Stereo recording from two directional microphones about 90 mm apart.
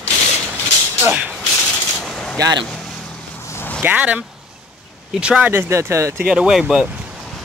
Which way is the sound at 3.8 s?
15° right (ahead or behind).